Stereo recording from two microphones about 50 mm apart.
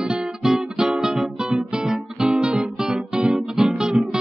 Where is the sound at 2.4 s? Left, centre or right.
Right.